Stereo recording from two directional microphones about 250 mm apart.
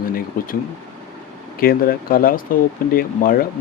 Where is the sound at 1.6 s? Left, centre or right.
Left.